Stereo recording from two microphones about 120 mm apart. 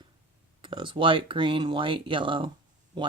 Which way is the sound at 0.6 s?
45° right (ahead or behind).